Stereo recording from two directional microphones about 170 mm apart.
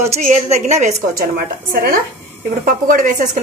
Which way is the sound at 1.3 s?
60° right (ahead or behind).